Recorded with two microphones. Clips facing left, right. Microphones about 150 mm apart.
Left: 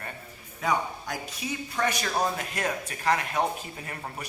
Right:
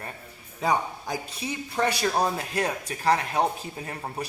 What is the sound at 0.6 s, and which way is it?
A man's voice, 30° right (ahead or behind).